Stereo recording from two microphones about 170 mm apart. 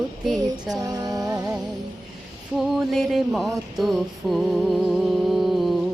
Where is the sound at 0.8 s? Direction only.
20° right (ahead or behind).